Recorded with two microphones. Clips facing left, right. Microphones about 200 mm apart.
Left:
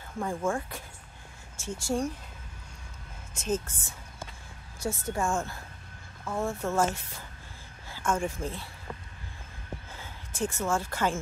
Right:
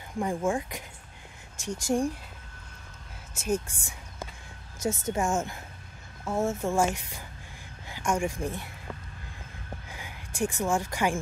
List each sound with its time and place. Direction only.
0.2 s a woman's voice: 15° right (ahead or behind)
3.3 s a woman's voice: 10° right (ahead or behind)
9.8 s speech: 15° right (ahead or behind)